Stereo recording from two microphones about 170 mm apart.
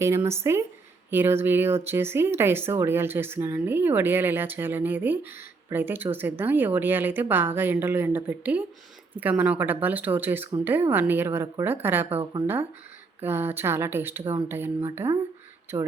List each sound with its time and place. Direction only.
0.0 s speech: 15° right (ahead or behind)
13.2 s speech: 15° right (ahead or behind)